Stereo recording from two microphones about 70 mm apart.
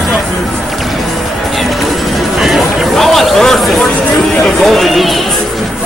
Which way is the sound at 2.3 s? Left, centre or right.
Centre.